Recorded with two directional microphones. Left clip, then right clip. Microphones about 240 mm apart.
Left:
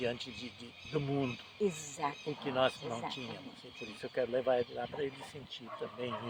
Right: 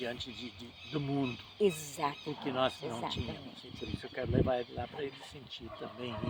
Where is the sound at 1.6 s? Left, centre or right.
Right.